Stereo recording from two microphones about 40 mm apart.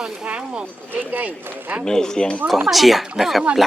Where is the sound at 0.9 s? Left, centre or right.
Right.